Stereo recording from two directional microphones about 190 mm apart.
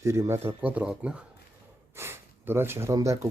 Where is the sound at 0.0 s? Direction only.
15° right (ahead or behind).